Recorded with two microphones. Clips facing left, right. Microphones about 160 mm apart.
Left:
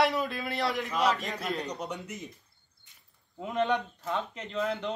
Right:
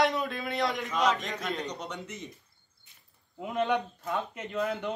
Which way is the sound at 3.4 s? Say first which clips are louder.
Even; 5° right (ahead or behind).